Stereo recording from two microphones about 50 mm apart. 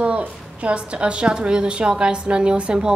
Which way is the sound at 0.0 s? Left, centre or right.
Right.